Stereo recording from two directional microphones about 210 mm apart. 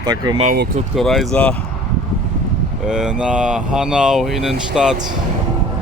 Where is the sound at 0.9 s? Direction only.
Centre (ahead or behind).